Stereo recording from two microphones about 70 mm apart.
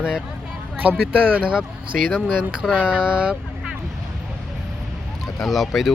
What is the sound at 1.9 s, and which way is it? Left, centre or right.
Speech, centre.